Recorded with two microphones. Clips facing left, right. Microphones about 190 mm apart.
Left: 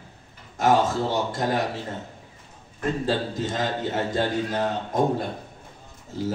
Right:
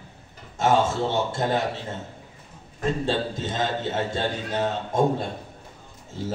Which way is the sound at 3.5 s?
25° right (ahead or behind).